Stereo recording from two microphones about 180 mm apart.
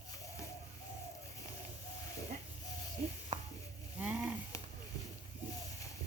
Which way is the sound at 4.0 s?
5° right (ahead or behind).